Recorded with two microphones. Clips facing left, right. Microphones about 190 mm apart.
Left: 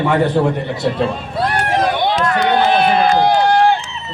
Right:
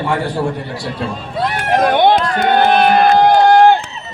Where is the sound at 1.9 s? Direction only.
55° right (ahead or behind).